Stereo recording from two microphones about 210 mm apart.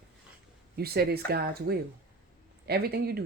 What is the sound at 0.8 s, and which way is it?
Speech, 50° right (ahead or behind).